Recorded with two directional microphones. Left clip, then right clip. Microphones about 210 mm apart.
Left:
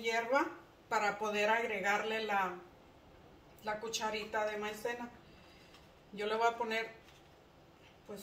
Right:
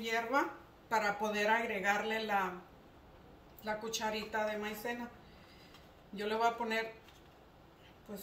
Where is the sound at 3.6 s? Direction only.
10° left (ahead or behind).